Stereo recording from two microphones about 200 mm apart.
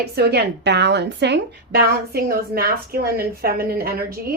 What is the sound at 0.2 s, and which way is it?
A woman's voice, 55° right (ahead or behind).